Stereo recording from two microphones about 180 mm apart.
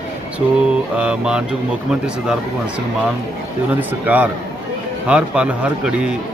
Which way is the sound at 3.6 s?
10° right (ahead or behind).